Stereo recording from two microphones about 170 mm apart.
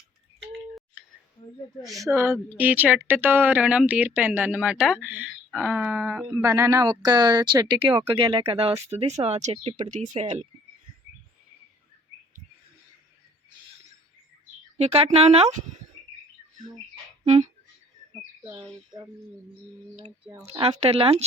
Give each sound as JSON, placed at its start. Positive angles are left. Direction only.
{"t": 2.0, "sound": "speech", "side_deg": -15}
{"t": 14.8, "sound": "speech", "side_deg": -40}
{"t": 17.2, "sound": "music", "side_deg": -40}
{"t": 20.5, "sound": "speech", "side_deg": -35}